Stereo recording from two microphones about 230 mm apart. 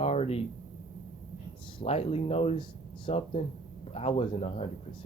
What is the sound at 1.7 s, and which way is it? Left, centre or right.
Speech, left.